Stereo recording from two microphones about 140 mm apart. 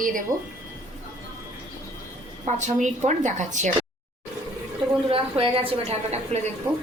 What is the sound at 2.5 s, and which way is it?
A woman's voice, 60° right (ahead or behind).